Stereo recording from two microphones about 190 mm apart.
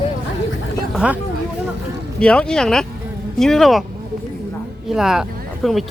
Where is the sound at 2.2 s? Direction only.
5° left (ahead or behind).